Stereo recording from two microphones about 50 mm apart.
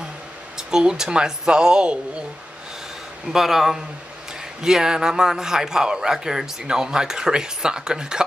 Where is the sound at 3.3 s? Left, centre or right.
Centre.